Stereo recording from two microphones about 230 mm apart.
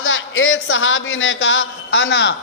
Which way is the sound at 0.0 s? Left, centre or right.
Left.